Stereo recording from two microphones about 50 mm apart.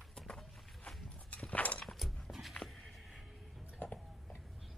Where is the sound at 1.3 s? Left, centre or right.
Left.